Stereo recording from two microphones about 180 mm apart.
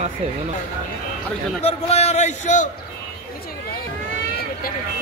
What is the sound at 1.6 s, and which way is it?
A man's voice, 35° left (ahead or behind).